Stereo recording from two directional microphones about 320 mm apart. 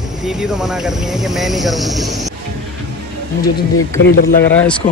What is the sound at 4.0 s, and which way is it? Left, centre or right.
Speech, left.